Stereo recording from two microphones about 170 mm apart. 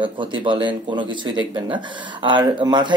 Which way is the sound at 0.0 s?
30° right (ahead or behind).